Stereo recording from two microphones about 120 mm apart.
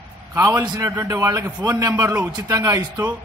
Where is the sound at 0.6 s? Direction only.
35° right (ahead or behind).